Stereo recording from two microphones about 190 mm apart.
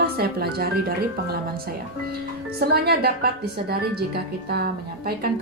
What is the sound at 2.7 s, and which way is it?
A woman's voice, 55° right (ahead or behind).